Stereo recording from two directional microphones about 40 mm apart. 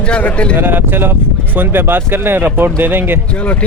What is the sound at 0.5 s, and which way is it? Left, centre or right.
Speech, right.